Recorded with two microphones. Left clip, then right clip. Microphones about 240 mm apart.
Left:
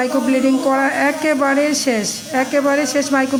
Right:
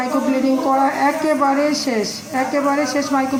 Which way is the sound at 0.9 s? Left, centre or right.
Left.